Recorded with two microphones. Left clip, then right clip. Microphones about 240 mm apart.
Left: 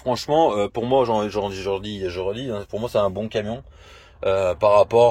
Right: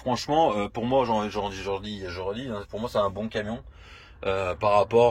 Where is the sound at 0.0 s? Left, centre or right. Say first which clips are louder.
Left 4 dB; left.